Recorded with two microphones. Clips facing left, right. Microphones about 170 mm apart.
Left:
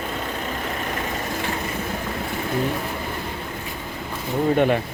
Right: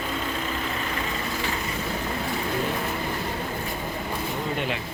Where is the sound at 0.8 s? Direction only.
50° left (ahead or behind).